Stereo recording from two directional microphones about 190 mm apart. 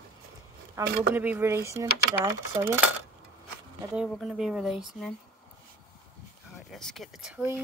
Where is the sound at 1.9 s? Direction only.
55° left (ahead or behind).